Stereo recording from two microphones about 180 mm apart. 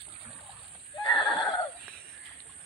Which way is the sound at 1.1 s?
30° left (ahead or behind).